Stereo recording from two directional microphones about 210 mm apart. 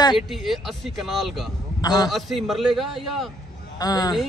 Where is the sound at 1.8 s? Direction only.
15° left (ahead or behind).